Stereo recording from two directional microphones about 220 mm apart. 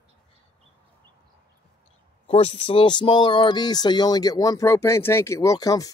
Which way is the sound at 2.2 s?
25° left (ahead or behind).